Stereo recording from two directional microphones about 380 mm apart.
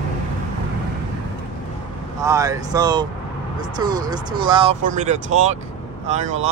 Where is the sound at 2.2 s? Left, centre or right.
Centre.